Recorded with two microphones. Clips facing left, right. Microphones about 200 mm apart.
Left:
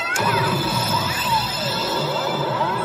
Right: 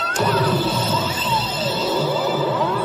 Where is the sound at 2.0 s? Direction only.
10° right (ahead or behind).